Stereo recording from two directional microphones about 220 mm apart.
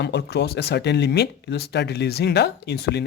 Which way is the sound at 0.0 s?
50° left (ahead or behind).